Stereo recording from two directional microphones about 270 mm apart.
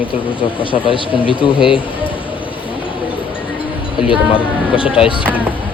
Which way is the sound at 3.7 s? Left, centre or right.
Centre.